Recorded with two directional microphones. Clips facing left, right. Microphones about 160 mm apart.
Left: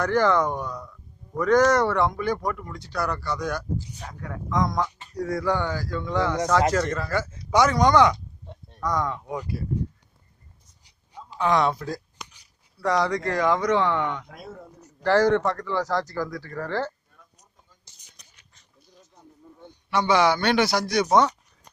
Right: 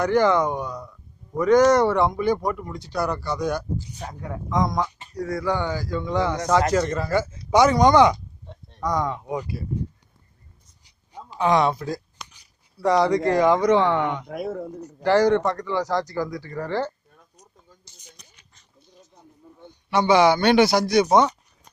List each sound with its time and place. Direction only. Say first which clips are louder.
0.0 s speech: right 2 dB; 15° right (ahead or behind)
11.3 s speech: right 2 dB; 15° right (ahead or behind)
12.8 s speech: right 5 dB; 25° right (ahead or behind)
14.3 s speech: right 12 dB; 65° right (ahead or behind)
15.0 s speech: right 2 dB; 15° right (ahead or behind)
19.9 s speech: right 4 dB; 20° right (ahead or behind)